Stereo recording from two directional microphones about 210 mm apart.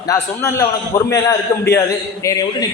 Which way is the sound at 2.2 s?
15° left (ahead or behind).